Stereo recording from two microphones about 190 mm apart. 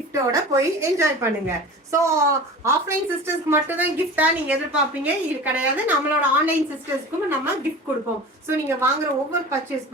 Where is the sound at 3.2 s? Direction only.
10° right (ahead or behind).